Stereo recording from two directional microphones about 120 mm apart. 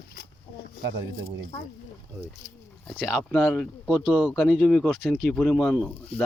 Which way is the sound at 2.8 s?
15° left (ahead or behind).